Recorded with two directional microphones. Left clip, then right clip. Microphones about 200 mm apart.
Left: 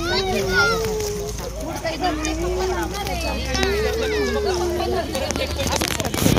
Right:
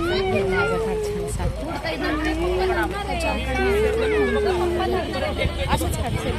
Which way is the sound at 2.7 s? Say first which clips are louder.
Right 1 dB; 50° right (ahead or behind).